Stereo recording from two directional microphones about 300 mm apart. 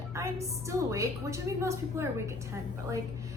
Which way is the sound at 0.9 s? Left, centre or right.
Centre.